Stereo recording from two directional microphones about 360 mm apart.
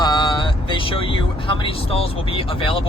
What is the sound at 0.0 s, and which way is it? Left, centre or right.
Speech, centre.